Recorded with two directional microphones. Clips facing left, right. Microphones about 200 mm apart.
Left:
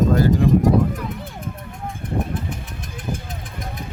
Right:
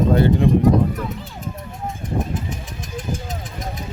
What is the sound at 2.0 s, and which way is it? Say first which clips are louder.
Vehicle: even; 60° left (ahead or behind).